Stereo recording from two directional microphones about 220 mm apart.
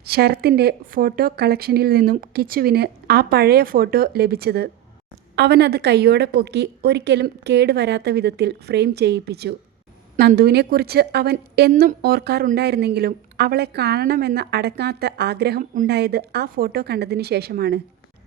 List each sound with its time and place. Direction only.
0.0 s speech: 45° right (ahead or behind)